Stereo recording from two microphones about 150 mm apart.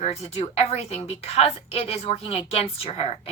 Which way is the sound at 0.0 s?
45° left (ahead or behind).